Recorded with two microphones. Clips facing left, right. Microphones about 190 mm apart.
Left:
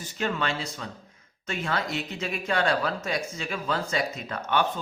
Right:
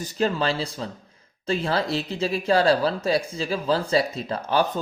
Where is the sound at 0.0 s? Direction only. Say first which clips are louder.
Right 6 dB; 35° right (ahead or behind).